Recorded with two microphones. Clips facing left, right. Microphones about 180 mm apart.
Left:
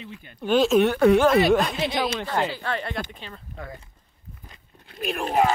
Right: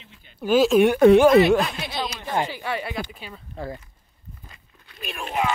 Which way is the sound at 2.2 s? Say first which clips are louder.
Even; 15° right (ahead or behind).